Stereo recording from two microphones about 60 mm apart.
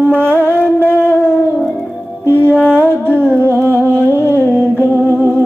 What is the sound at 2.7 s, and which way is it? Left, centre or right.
Music, right.